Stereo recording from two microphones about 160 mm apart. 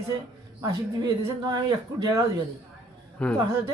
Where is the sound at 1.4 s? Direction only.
25° right (ahead or behind).